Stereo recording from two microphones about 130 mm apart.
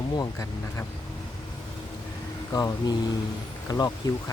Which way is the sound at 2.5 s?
30° left (ahead or behind).